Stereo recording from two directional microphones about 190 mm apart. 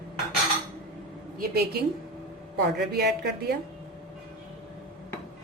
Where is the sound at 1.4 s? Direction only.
55° right (ahead or behind).